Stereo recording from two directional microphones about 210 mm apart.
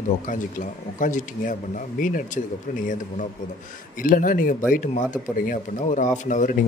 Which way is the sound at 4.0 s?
40° left (ahead or behind).